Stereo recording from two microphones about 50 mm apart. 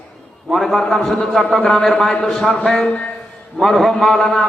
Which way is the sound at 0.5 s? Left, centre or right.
Centre.